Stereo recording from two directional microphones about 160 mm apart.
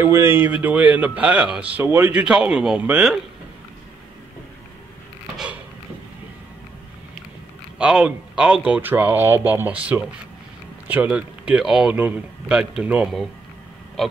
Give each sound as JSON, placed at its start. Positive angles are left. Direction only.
{"t": 0.0, "sound": "a man's voice", "side_deg": -15}
{"t": 7.8, "sound": "a man's voice", "side_deg": -5}